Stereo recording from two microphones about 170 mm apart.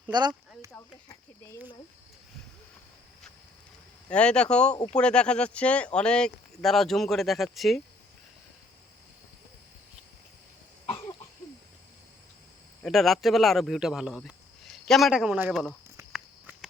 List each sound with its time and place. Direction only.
0.1 s speech: 25° right (ahead or behind)
4.1 s speech: 5° left (ahead or behind)
12.8 s speech: centre (ahead or behind)
16.1 s walk: 5° right (ahead or behind)